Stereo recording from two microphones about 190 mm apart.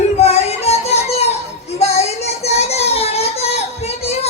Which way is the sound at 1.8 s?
35° left (ahead or behind).